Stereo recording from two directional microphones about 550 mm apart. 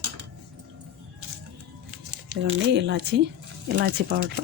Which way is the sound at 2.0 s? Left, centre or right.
Right.